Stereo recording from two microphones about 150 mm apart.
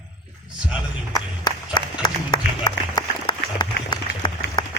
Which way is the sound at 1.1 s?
25° left (ahead or behind).